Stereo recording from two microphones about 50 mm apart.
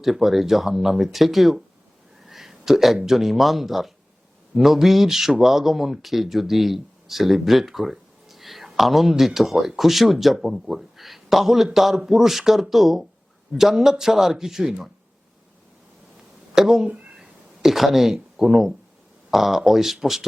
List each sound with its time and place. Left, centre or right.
0.0 s a man's voice: centre
16.6 s speech: centre
16.8 s speech: right
17.2 s a sound: centre
19.3 s speech: centre